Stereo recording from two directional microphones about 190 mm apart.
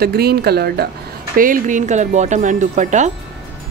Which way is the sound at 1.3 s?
45° right (ahead or behind).